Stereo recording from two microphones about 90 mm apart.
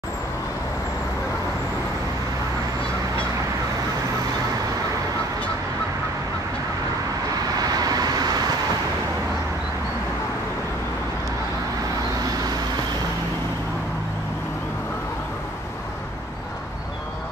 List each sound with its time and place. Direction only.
7.5 s vehicle: 45° right (ahead or behind)